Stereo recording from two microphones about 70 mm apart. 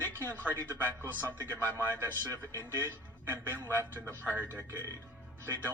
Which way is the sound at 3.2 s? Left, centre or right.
Right.